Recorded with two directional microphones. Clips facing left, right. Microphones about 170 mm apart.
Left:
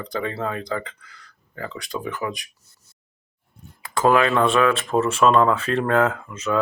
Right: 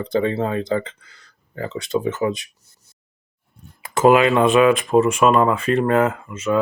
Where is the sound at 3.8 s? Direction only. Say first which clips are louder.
Right 4 dB; 20° right (ahead or behind).